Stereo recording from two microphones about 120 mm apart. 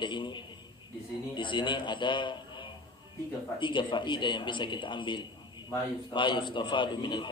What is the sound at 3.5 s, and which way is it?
Speech, 40° left (ahead or behind).